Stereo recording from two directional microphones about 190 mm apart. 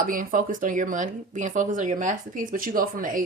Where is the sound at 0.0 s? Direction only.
45° right (ahead or behind).